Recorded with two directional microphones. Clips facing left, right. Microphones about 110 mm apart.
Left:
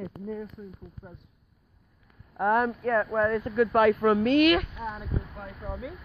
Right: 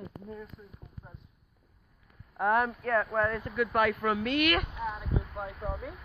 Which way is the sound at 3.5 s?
30° left (ahead or behind).